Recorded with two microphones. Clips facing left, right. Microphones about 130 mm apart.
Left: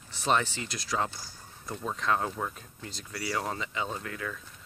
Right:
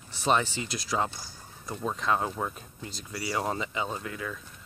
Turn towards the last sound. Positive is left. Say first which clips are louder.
# right 1 dB
turn(degrees=-10)  # may be behind; listen again after turning